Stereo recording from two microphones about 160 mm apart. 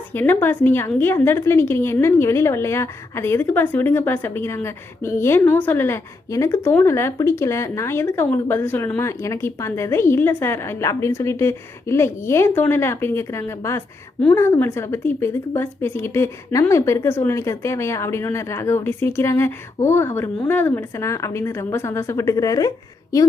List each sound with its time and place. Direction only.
0.1 s a woman's voice: 15° left (ahead or behind)